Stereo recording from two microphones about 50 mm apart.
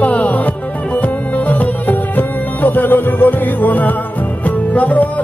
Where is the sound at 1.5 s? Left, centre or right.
Left.